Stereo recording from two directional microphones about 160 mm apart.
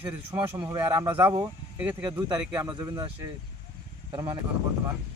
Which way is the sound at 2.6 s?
25° right (ahead or behind).